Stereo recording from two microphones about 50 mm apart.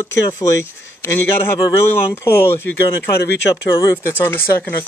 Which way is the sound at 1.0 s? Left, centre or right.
Left.